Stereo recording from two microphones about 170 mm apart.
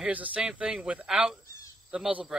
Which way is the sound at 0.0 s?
10° right (ahead or behind).